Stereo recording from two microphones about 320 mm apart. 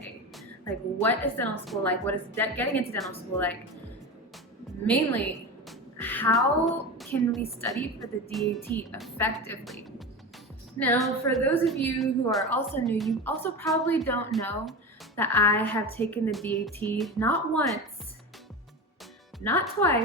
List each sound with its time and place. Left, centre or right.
1.0 s a woman's voice: centre
4.9 s a woman's voice: centre
10.8 s a woman's voice: centre
19.5 s a woman's voice: centre